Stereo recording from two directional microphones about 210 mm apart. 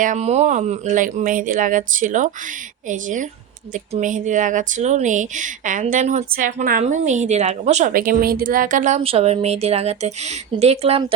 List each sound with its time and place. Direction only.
0.0 s speech: 35° right (ahead or behind)